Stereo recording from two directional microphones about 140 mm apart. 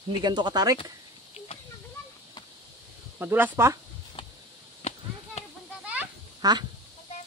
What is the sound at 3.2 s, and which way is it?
Speech, 15° right (ahead or behind).